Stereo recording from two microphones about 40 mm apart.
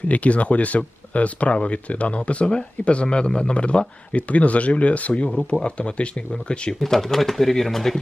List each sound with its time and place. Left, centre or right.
0.1 s speech: left
6.7 s speech: centre